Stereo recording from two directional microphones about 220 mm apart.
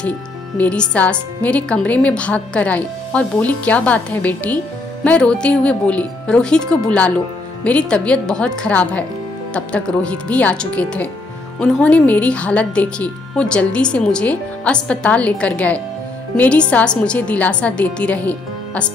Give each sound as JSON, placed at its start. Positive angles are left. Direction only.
{"t": 0.6, "sound": "a woman's voice", "side_deg": 5}